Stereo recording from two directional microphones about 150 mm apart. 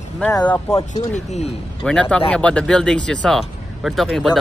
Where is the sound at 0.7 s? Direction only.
50° left (ahead or behind).